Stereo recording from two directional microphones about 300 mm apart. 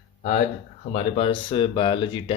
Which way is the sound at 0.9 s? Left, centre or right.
Left.